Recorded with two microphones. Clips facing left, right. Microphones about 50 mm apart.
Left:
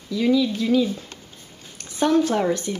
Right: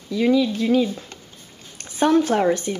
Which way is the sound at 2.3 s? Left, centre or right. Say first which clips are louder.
Right 3 dB; centre.